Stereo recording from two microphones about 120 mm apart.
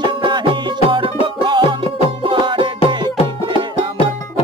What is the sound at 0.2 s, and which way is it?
Music, 40° right (ahead or behind).